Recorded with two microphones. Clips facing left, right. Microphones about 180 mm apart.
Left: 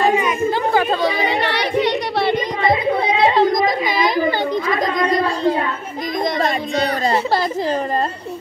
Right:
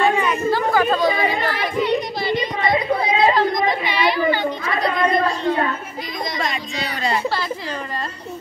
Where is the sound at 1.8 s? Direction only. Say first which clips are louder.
Left 2 dB; 75° left (ahead or behind).